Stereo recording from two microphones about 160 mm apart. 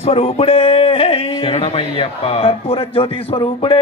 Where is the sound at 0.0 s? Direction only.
40° left (ahead or behind).